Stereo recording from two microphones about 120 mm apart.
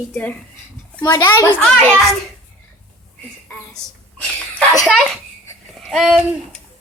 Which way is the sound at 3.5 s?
20° left (ahead or behind).